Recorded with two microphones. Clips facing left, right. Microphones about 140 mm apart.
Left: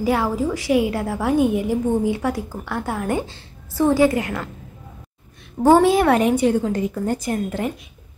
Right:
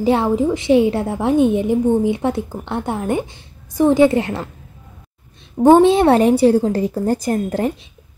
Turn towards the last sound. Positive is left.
turn(degrees=-35)  # may be behind; listen again after turning